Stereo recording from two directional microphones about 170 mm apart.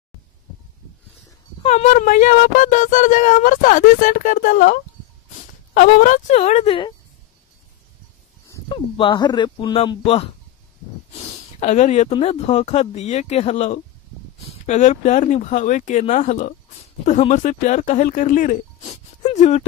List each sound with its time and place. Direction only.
1.6 s speech: 40° left (ahead or behind)
5.8 s speech: 50° left (ahead or behind); by 6.9 s 35° left (ahead or behind)
8.6 s speech: 30° left (ahead or behind)
11.1 s a sound: 45° left (ahead or behind)
12.2 s speech: 40° left (ahead or behind)